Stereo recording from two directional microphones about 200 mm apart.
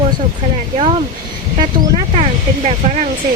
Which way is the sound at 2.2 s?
35° right (ahead or behind).